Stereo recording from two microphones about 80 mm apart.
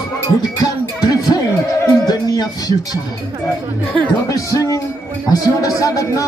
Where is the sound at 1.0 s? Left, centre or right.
Left.